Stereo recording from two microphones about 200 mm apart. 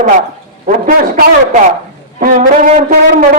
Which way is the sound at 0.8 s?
40° right (ahead or behind).